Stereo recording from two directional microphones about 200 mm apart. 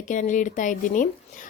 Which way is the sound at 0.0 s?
40° left (ahead or behind).